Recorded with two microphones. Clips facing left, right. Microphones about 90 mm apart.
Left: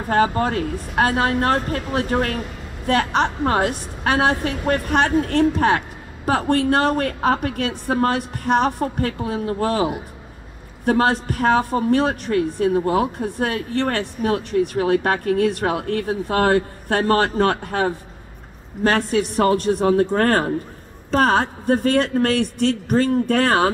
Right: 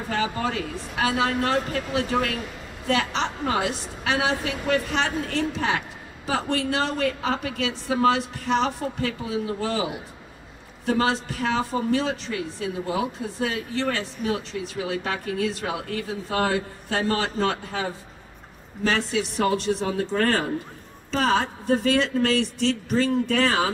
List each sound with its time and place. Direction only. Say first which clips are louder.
0.1 s a woman's voice: left 8 dB; 50° left (ahead or behind)